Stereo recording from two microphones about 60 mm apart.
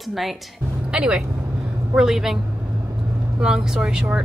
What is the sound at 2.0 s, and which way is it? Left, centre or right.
Speech, centre.